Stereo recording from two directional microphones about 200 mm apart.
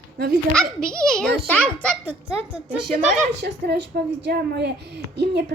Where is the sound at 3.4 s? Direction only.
55° right (ahead or behind).